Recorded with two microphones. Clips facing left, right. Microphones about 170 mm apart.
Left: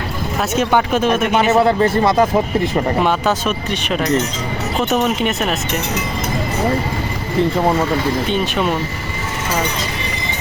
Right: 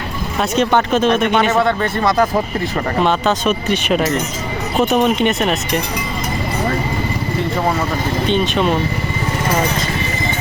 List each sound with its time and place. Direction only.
0.5 s speech: 10° left (ahead or behind)
1.5 s speech: 30° left (ahead or behind); by 3.5 s 10° left (ahead or behind)
3.7 s speech: 5° right (ahead or behind)
4.8 s a woman's voice: 15° right (ahead or behind)
5.2 s speech: 5° left (ahead or behind)
8.3 s speech: 5° left (ahead or behind)